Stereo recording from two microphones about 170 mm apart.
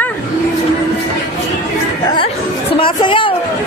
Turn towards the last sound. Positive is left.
turn(degrees=30)  # may be behind; listen again after turning